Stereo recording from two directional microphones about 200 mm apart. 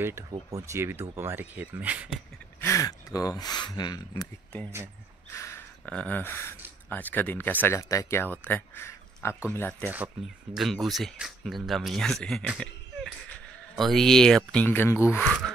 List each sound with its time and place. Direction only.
0.0 s speech: 15° right (ahead or behind)
2.6 s speech: 15° left (ahead or behind)
5.3 s gasp: 15° left (ahead or behind)
6.9 s speech: 10° left (ahead or behind)
10.5 s speech: centre (ahead or behind)